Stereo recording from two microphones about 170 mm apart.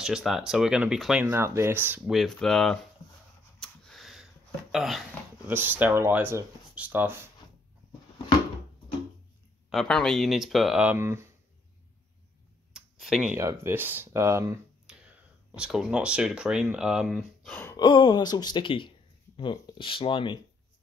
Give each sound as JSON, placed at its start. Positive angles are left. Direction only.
{"t": 0.0, "sound": "speech", "side_deg": 0}
{"t": 1.2, "sound": "speech", "side_deg": -15}
{"t": 2.1, "sound": "speech", "side_deg": 5}
{"t": 3.5, "sound": "a sound", "side_deg": 5}
{"t": 4.7, "sound": "speech", "side_deg": 0}
{"t": 5.5, "sound": "speech", "side_deg": -10}
{"t": 9.7, "sound": "speech", "side_deg": 0}
{"t": 12.7, "sound": "a sound", "side_deg": 0}
{"t": 13.4, "sound": "speech", "side_deg": -15}
{"t": 15.5, "sound": "speech", "side_deg": -5}
{"t": 17.5, "sound": "gasp", "side_deg": 10}
{"t": 17.7, "sound": "speech", "side_deg": 25}